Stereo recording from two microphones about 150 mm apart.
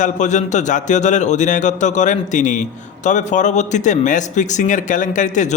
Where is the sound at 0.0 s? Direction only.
55° left (ahead or behind).